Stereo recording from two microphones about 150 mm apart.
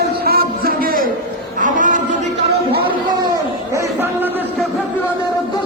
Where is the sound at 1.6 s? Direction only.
60° right (ahead or behind).